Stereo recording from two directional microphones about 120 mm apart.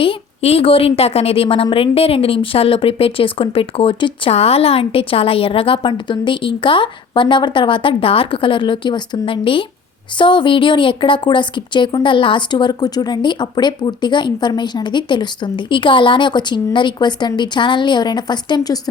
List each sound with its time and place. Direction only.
0.0 s speech: 50° left (ahead or behind); by 18.8 s 35° left (ahead or behind)